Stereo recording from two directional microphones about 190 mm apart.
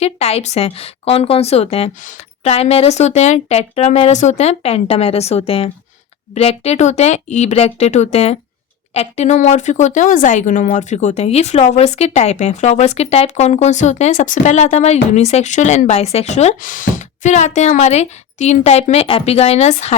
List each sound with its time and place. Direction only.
0.0 s speech: 30° left (ahead or behind)